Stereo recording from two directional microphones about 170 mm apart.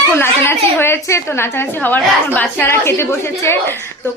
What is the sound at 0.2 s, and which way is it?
A woman's voice, 15° left (ahead or behind).